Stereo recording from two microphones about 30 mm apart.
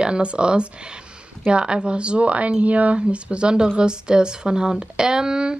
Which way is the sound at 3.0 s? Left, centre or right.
Right.